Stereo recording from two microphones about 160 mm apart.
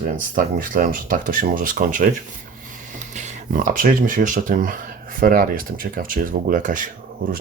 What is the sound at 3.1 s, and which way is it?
Speech, 50° right (ahead or behind).